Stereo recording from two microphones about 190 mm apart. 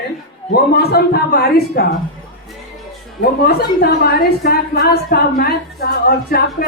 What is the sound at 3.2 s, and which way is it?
A woman's voice, 55° left (ahead or behind).